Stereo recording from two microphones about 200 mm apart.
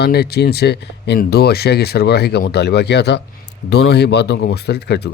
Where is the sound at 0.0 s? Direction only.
55° left (ahead or behind).